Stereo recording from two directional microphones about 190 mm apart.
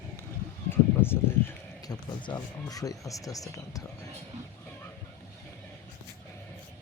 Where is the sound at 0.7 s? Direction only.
10° left (ahead or behind).